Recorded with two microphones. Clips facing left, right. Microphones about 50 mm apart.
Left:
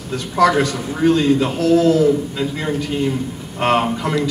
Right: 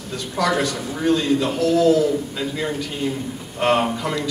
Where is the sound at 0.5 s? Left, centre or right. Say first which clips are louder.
Left 4 dB; left.